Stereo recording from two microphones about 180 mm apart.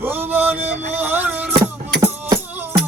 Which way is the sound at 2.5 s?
10° right (ahead or behind).